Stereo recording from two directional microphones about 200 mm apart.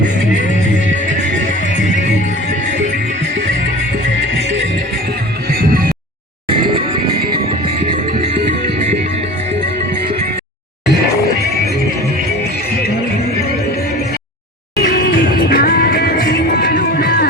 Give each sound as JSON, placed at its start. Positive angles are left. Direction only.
{"t": 5.5, "sound": "music", "side_deg": -50}
{"t": 6.5, "sound": "music", "side_deg": -25}
{"t": 14.8, "sound": "music", "side_deg": 50}